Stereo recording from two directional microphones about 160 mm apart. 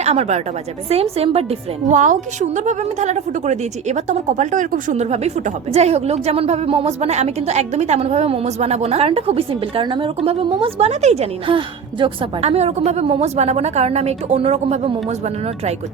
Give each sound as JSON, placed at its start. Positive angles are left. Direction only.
{"t": 0.0, "sound": "a woman's voice", "side_deg": -40}